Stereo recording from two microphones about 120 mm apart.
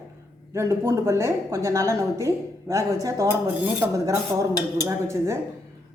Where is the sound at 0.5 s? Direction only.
25° right (ahead or behind).